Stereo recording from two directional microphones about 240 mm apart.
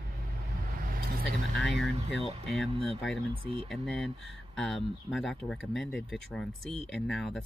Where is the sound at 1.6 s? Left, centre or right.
Centre.